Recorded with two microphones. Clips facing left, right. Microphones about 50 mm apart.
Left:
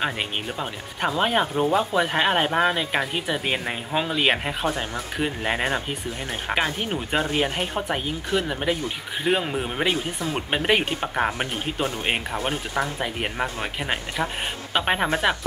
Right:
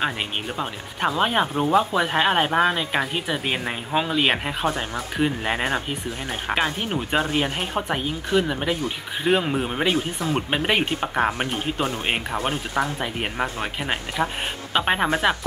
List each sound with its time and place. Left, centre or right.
0.6 s speech: centre